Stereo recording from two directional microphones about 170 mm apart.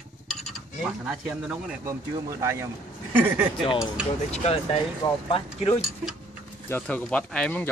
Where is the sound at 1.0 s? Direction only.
5° right (ahead or behind).